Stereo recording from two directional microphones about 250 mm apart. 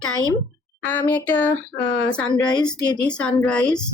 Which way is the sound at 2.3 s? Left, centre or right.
Centre.